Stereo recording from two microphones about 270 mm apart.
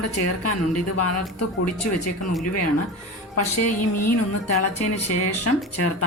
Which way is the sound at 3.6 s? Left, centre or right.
Left.